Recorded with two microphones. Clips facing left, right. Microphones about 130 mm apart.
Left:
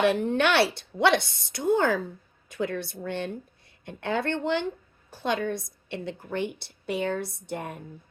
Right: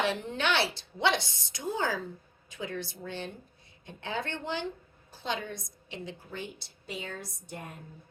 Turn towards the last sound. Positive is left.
turn(degrees=70)  # may be behind; listen again after turning